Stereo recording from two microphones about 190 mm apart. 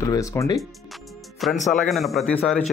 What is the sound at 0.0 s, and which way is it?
Speech, 15° left (ahead or behind).